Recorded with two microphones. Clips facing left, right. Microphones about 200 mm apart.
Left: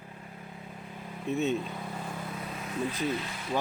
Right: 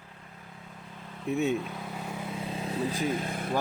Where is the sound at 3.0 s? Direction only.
50° right (ahead or behind).